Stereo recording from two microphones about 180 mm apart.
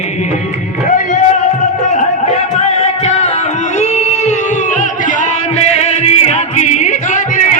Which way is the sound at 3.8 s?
40° left (ahead or behind).